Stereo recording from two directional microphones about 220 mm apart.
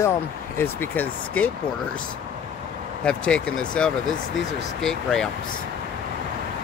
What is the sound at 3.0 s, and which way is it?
Speech, 5° left (ahead or behind).